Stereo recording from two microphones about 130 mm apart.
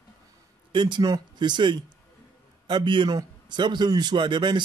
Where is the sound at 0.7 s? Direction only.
35° right (ahead or behind).